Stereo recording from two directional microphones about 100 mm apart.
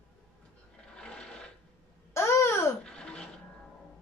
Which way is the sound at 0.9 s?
10° left (ahead or behind).